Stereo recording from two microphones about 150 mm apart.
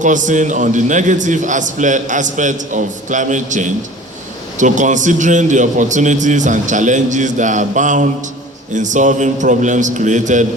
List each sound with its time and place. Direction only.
0.0 s a man's voice: 55° right (ahead or behind)